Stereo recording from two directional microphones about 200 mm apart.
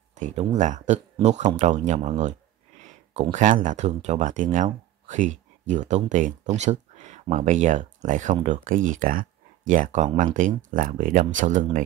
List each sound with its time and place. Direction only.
0.1 s speech: 35° right (ahead or behind)